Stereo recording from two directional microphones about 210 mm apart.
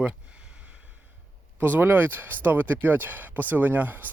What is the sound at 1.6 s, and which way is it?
Speech, 10° right (ahead or behind).